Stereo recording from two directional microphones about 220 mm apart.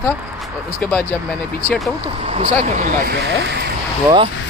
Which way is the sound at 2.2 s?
25° right (ahead or behind).